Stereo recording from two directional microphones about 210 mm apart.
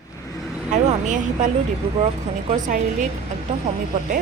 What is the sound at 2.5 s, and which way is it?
Speech, 35° right (ahead or behind).